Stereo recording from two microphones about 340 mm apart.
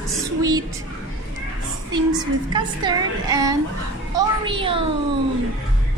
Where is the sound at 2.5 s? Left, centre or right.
Centre.